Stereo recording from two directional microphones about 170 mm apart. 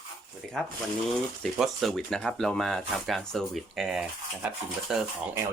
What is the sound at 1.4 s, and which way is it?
Speech, centre (ahead or behind).